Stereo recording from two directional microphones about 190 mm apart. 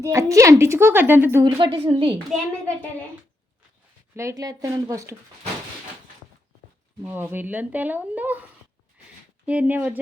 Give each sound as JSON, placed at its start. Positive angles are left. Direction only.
{"t": 0.0, "sound": "a woman's voice", "side_deg": -15}
{"t": 1.5, "sound": "a woman's voice", "side_deg": -25}
{"t": 2.1, "sound": "a child's voice", "side_deg": 5}
{"t": 4.1, "sound": "a woman's voice", "side_deg": -15}
{"t": 7.0, "sound": "a woman's voice", "side_deg": -10}
{"t": 9.5, "sound": "a woman's voice", "side_deg": -10}